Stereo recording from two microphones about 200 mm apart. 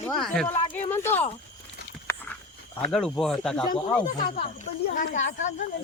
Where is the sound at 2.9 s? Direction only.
Centre (ahead or behind).